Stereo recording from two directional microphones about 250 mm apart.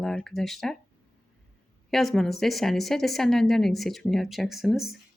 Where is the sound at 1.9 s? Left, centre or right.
Centre.